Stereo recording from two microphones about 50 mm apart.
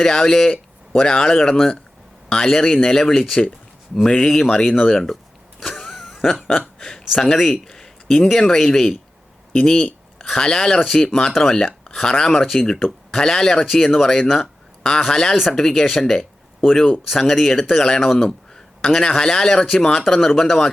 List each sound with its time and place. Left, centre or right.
0.0 s speech: centre
5.5 s a sound: centre
7.3 s speech: centre
7.5 s a sound: centre
8.3 s speech: centre
10.2 s speech: centre
11.3 s speech: centre
11.5 s speech: centre